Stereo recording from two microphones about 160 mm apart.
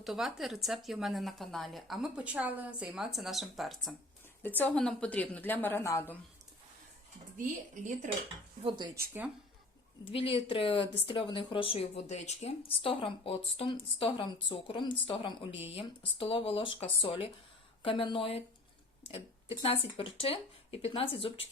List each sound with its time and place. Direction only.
0.0 s a woman's voice: centre (ahead or behind)
4.4 s a woman's voice: 10° left (ahead or behind)
7.3 s speech: 55° right (ahead or behind)
8.6 s speech: 30° right (ahead or behind)
10.0 s speech: 35° left (ahead or behind)